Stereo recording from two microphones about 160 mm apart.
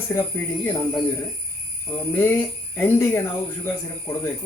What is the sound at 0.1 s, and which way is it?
Speech, 15° left (ahead or behind).